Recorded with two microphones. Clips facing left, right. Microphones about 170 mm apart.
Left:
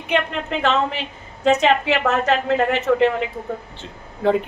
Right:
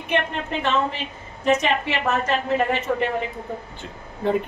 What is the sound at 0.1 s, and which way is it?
A woman's voice, 90° left.